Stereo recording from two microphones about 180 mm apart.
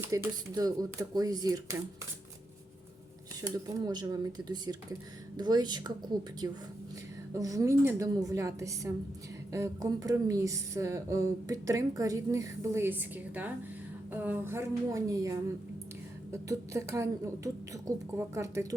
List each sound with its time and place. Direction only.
0.1 s speech: 20° right (ahead or behind)
3.4 s speech: 20° right (ahead or behind)
7.3 s speech: 20° right (ahead or behind)